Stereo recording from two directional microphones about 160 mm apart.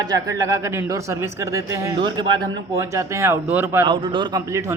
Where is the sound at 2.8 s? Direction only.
20° right (ahead or behind).